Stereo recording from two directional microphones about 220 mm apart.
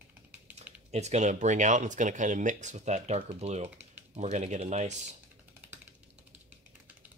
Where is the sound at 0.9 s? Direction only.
30° right (ahead or behind).